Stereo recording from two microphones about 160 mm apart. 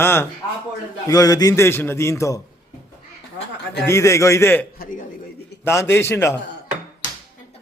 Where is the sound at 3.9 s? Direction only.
20° left (ahead or behind).